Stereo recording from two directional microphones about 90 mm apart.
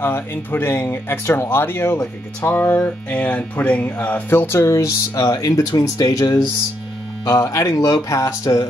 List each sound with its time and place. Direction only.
0.0 s speech: 25° left (ahead or behind)